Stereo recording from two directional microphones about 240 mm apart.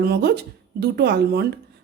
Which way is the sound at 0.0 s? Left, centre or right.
Right.